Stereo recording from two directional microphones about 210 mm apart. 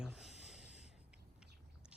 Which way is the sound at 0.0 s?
Centre (ahead or behind).